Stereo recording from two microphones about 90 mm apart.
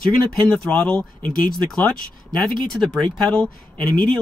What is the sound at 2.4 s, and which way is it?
Speech, 5° left (ahead or behind).